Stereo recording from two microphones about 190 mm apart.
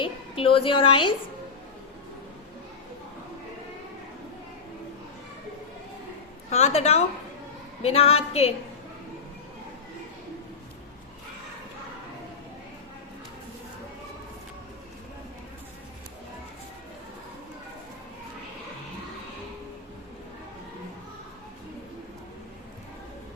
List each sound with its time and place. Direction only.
0.0 s a woman's voice: 30° left (ahead or behind)
6.5 s a woman's voice: 35° left (ahead or behind)